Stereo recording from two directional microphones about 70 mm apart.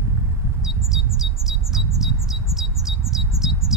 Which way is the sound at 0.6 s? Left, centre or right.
Centre.